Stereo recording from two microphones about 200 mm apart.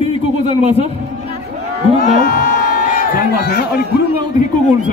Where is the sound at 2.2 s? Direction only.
45° left (ahead or behind).